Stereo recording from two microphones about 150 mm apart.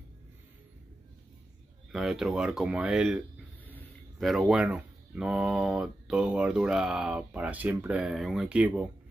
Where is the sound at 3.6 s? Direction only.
10° left (ahead or behind).